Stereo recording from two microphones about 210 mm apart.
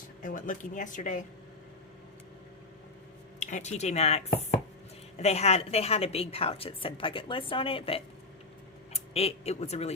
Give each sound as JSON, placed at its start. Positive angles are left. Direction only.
{"t": 0.2, "sound": "speech", "side_deg": 40}
{"t": 3.4, "sound": "a woman's voice", "side_deg": 35}